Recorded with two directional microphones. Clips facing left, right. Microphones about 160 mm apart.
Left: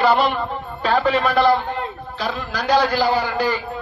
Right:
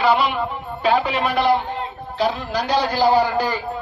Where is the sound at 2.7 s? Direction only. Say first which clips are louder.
Left 3 dB; 90° left.